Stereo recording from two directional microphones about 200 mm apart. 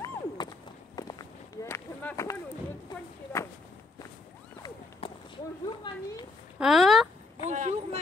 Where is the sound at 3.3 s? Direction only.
15° left (ahead or behind).